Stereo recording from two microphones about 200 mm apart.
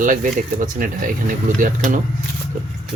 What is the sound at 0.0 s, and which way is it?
Speech, 40° right (ahead or behind).